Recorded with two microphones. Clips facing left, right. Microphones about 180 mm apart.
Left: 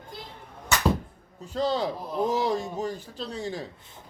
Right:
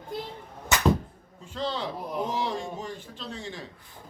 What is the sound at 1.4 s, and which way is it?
A man's voice, 40° left (ahead or behind).